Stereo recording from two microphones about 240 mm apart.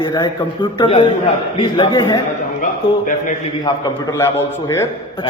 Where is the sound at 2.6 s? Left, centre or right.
Left.